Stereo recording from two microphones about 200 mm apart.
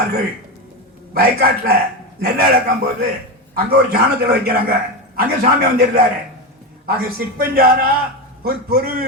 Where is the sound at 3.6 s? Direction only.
50° right (ahead or behind).